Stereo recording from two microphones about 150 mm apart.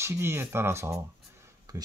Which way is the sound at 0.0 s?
15° right (ahead or behind).